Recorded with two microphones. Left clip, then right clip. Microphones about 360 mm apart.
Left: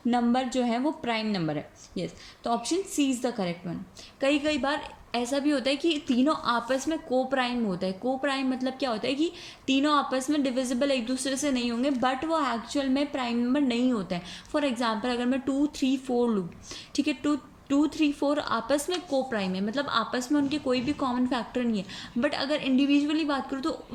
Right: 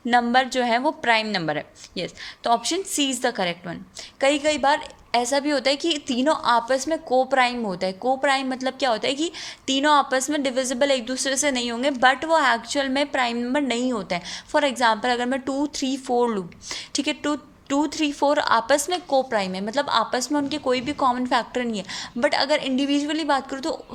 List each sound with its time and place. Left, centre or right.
0.1 s a woman's voice: right